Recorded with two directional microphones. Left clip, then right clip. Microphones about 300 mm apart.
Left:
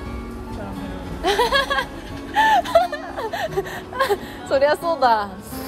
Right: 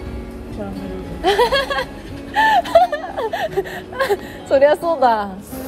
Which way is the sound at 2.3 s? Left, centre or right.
Centre.